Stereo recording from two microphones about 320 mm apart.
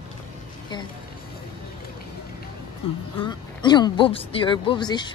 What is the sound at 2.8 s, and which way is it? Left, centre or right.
A woman's voice, centre.